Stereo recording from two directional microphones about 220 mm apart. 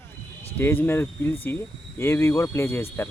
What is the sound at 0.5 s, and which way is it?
Speech, 10° left (ahead or behind).